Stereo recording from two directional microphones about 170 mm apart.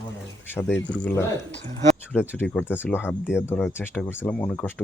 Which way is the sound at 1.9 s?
5° left (ahead or behind).